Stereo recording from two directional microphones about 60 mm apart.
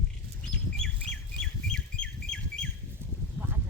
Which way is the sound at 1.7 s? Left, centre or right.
Centre.